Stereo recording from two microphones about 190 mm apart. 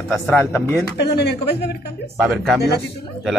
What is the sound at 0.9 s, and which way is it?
Speech, 60° left (ahead or behind).